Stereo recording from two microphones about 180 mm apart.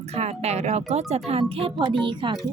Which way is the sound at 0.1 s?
35° right (ahead or behind).